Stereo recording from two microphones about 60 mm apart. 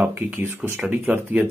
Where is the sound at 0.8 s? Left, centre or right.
Right.